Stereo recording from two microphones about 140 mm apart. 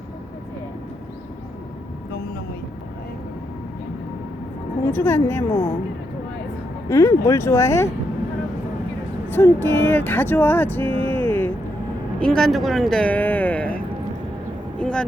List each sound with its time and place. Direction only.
4.9 s speech: 15° left (ahead or behind)
6.8 s speech: 20° left (ahead or behind)
9.3 s speech: 15° left (ahead or behind)
12.2 s speech: 5° left (ahead or behind)
14.8 s speech: 5° left (ahead or behind)